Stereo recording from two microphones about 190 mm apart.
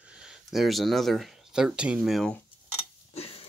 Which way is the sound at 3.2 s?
30° left (ahead or behind).